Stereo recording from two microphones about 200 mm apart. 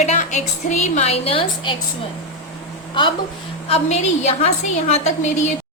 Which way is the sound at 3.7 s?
30° left (ahead or behind).